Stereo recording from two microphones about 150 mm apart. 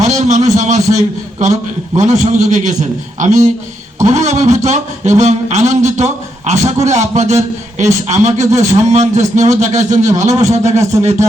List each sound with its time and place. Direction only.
0.0 s a man's voice: 55° right (ahead or behind)
8.4 s a man's voice: 20° right (ahead or behind)
8.9 s speech: 50° right (ahead or behind)